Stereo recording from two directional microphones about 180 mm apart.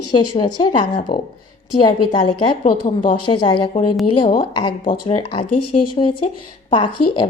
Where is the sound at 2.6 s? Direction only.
45° left (ahead or behind).